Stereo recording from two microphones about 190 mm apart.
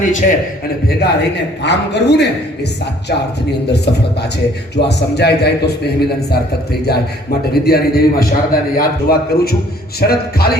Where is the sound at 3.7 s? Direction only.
60° left (ahead or behind).